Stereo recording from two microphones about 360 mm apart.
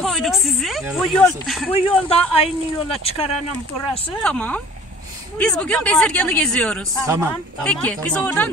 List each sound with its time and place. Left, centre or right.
0.0 s a sound: centre
1.7 s a man's voice: centre
4.2 s a woman's voice: centre